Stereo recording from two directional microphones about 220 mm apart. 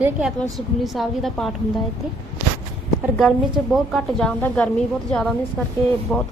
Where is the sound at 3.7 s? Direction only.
Centre (ahead or behind).